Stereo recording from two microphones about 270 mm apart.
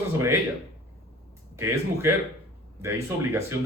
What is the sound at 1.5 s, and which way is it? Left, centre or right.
Speech, centre.